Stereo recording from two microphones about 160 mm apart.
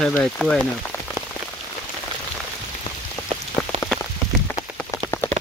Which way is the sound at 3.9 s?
5° left (ahead or behind).